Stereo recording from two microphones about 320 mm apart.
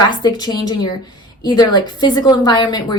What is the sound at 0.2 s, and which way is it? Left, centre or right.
A woman's voice, centre.